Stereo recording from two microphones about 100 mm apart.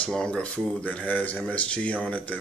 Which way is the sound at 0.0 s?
10° left (ahead or behind).